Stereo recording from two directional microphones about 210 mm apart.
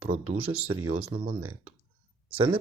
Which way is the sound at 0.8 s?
90° right.